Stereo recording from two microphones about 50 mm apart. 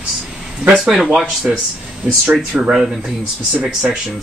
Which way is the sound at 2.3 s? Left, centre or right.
Right.